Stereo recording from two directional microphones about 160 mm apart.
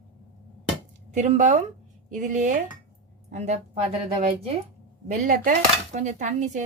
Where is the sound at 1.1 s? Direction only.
45° right (ahead or behind).